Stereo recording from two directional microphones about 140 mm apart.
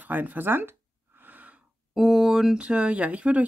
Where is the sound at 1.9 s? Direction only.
Centre (ahead or behind).